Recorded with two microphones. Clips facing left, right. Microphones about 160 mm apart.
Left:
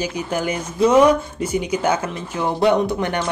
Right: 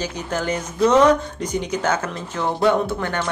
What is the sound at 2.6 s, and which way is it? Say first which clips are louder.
Speech: left 2 dB; 20° left (ahead or behind).